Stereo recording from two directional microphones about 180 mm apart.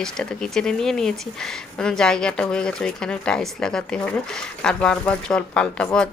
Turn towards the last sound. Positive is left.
turn(degrees=5)  # may be behind; listen again after turning